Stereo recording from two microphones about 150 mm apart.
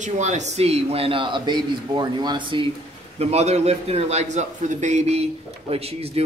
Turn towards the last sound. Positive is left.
turn(degrees=-40)  # may be behind; listen again after turning